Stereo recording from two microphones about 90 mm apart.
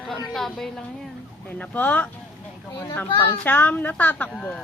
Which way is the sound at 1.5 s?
15° left (ahead or behind).